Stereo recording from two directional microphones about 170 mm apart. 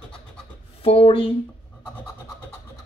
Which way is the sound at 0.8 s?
35° left (ahead or behind).